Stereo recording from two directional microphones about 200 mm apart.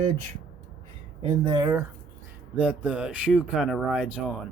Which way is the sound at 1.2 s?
25° right (ahead or behind).